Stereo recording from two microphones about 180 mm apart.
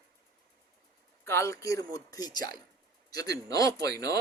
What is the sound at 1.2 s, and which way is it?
Speech, 15° left (ahead or behind).